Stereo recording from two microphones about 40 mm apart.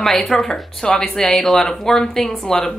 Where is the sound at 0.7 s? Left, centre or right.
Centre.